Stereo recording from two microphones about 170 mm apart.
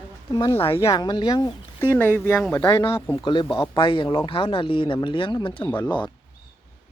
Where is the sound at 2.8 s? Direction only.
30° left (ahead or behind).